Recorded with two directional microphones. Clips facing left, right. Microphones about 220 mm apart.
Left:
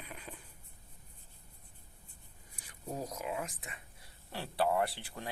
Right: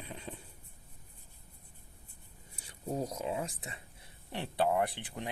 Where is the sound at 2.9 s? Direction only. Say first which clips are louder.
Right 3 dB; 30° right (ahead or behind).